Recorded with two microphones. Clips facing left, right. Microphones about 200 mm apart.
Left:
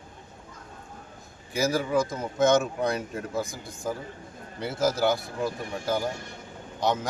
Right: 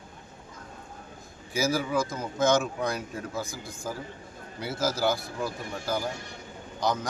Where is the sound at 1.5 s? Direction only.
Centre (ahead or behind).